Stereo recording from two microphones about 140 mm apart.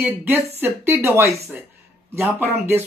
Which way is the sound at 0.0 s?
15° right (ahead or behind).